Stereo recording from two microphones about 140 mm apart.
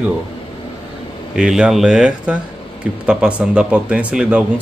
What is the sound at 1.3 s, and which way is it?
Speech, 5° right (ahead or behind).